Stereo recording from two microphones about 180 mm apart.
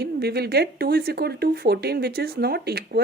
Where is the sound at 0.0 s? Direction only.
65° right (ahead or behind).